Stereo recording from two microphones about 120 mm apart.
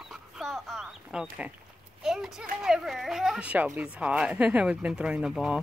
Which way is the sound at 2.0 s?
5° right (ahead or behind).